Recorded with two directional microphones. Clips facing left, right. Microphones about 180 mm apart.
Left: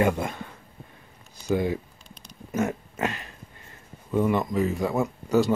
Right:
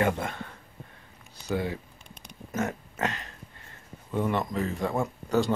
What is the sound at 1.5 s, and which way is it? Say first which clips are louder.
Speech: left 5 dB; 15° left (ahead or behind).